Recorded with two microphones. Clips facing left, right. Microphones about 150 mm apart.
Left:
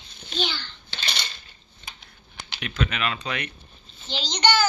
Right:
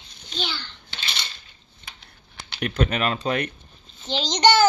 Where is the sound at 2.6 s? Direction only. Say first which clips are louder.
Right 5 dB; 45° right (ahead or behind).